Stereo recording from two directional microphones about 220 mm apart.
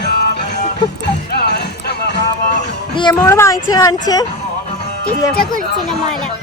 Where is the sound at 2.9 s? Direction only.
15° left (ahead or behind).